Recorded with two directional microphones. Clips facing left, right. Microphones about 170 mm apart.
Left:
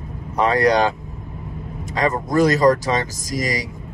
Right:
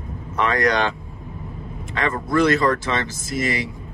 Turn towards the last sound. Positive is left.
turn(degrees=40)  # may be behind; listen again after turning